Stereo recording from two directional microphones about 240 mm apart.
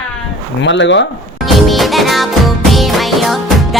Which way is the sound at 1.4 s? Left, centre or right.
Centre.